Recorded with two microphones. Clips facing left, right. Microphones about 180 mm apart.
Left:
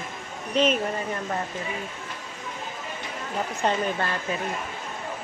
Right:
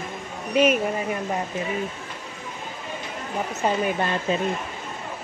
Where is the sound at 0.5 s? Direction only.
10° right (ahead or behind).